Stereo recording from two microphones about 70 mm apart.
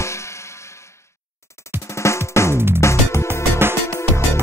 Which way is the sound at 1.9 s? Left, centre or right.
Left.